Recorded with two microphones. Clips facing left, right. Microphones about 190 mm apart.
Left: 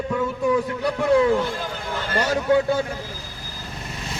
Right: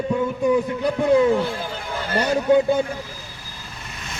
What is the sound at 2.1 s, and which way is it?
Speech, 20° right (ahead or behind).